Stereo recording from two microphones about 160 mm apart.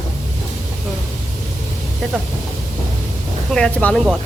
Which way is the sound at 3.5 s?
5° left (ahead or behind).